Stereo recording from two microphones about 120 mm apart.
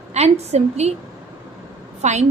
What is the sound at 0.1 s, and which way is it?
Speech, 65° right (ahead or behind).